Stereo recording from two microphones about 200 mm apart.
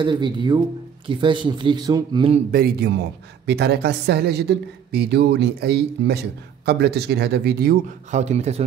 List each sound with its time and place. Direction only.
0.0 s speech: 25° right (ahead or behind)
2.5 s a man's voice: 50° right (ahead or behind)
8.1 s speech: 35° right (ahead or behind)